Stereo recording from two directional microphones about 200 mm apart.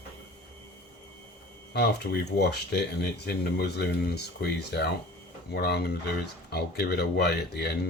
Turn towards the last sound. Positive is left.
turn(degrees=55)  # may be behind; listen again after turning